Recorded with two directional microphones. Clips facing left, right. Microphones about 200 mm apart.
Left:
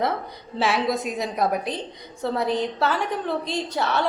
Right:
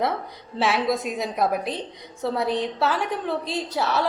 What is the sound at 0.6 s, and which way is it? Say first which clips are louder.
A woman's voice: even; centre (ahead or behind).